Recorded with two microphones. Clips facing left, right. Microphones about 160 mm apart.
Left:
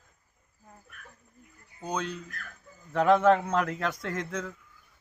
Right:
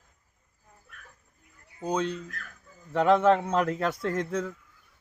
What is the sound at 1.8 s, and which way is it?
Speech, 30° right (ahead or behind).